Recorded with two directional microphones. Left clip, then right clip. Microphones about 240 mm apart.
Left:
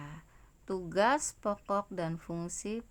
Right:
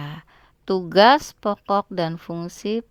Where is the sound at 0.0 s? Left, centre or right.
Right.